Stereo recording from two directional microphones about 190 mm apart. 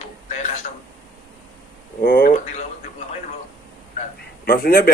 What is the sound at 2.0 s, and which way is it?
Speech, 45° left (ahead or behind).